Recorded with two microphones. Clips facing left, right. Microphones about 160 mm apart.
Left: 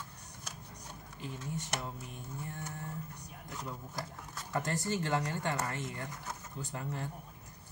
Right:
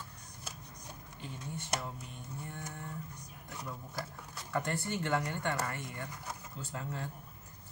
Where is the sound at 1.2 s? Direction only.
15° left (ahead or behind).